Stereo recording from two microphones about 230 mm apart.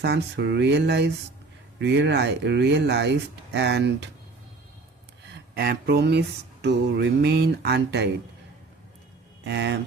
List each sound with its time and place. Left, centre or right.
0.0 s speech: right
5.3 s speech: right
9.4 s speech: right